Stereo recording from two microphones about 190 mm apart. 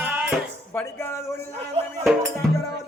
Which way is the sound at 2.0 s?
Centre (ahead or behind).